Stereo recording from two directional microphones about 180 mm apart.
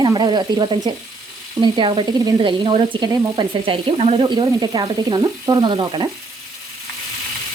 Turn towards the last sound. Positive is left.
turn(degrees=-25)  # may be behind; listen again after turning